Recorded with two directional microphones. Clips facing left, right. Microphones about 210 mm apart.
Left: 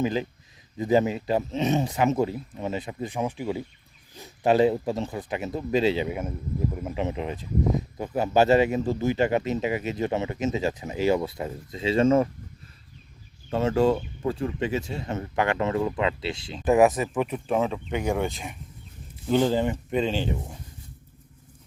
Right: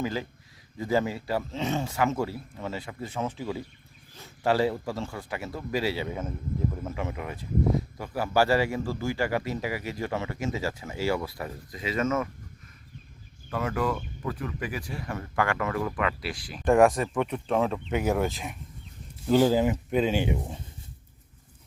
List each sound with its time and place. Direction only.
0.0 s a man's voice: 20° left (ahead or behind)
13.5 s a man's voice: 25° left (ahead or behind)
16.6 s speech: 5° left (ahead or behind); by 20.6 s 15° right (ahead or behind)